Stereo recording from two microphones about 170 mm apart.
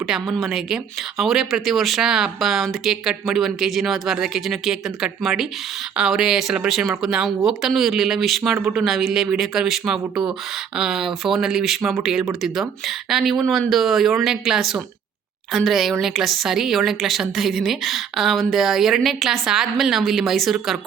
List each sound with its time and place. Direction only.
0.1 s speech: centre (ahead or behind)